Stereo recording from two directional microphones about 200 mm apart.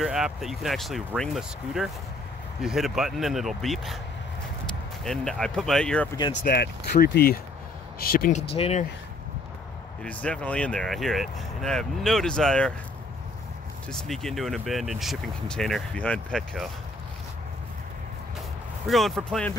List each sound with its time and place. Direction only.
0.0 s speech: centre (ahead or behind)
5.0 s speech: centre (ahead or behind)
6.4 s speech: 55° left (ahead or behind); by 8.8 s 30° left (ahead or behind)
10.0 s speech: 5° left (ahead or behind)
13.8 s speech: centre (ahead or behind)
18.9 s speech: centre (ahead or behind)